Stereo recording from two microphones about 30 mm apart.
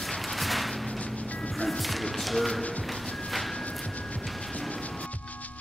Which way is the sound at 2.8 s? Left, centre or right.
Centre.